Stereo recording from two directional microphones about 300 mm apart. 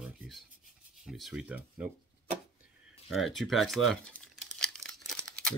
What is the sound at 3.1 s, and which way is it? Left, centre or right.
Crumpling, centre.